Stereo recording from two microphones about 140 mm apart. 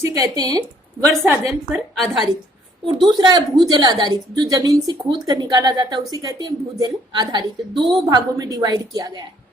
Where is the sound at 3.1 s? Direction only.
30° right (ahead or behind).